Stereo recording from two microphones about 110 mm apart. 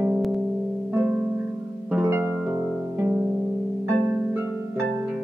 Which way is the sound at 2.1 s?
20° right (ahead or behind).